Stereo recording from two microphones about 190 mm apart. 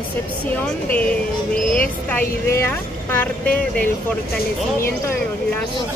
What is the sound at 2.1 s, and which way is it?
A woman's voice, 10° left (ahead or behind).